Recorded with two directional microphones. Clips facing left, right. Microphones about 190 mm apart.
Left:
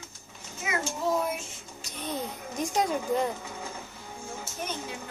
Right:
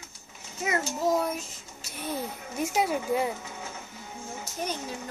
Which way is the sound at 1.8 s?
5° right (ahead or behind).